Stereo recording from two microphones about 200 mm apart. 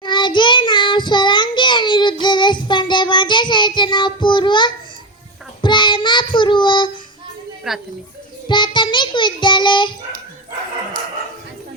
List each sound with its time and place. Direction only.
0.0 s child singing: 20° left (ahead or behind)
7.7 s speech: centre (ahead or behind)
8.4 s child singing: 25° left (ahead or behind)